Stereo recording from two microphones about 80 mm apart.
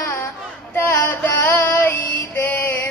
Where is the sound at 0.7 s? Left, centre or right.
Centre.